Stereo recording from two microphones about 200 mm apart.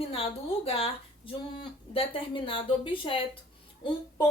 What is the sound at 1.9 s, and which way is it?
A woman's voice, 25° left (ahead or behind).